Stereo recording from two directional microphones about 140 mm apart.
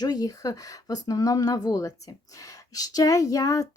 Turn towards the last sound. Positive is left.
turn(degrees=25)  # may be behind; listen again after turning